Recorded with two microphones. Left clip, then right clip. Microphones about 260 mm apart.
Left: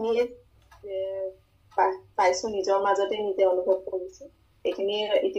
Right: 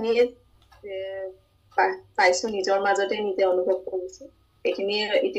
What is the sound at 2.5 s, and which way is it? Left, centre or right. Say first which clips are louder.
Speech: right 1 dB; right.